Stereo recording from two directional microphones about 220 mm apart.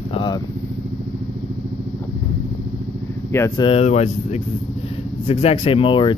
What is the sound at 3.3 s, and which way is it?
Speech, 15° left (ahead or behind).